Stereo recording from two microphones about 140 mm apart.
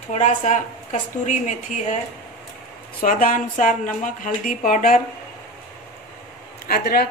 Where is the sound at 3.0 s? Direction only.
75° left (ahead or behind).